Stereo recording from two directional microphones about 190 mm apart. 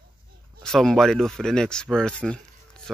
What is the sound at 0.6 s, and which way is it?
Speech, centre (ahead or behind).